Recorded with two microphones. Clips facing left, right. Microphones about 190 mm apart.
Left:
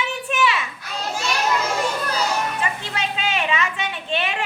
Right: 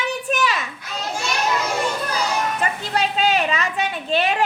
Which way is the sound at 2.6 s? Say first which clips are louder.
Right 4 dB; 40° right (ahead or behind).